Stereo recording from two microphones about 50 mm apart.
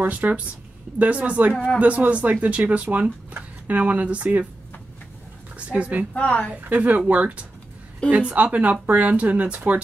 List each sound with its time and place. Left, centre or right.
0.0 s speech: right
5.7 s speech: right
6.1 s a woman's voice: left
6.7 s speech: right